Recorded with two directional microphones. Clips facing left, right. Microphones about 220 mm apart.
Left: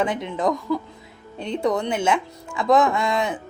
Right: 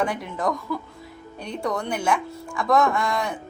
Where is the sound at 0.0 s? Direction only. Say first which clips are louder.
Left 3 dB; 20° left (ahead or behind).